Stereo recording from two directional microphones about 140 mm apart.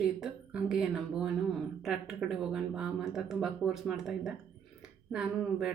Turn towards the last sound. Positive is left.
turn(degrees=-5)  # may be behind; listen again after turning